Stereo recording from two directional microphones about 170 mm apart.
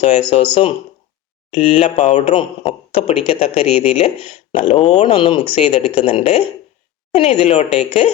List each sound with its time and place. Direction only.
0.0 s speech: 35° left (ahead or behind)